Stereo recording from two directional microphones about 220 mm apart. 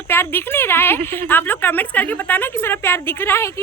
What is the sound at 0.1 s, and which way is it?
A woman's voice, 10° left (ahead or behind).